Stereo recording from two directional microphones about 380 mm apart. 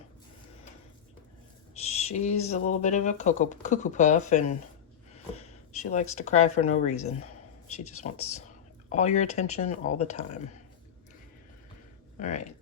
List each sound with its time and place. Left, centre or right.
1.7 s speech: centre
12.2 s speech: centre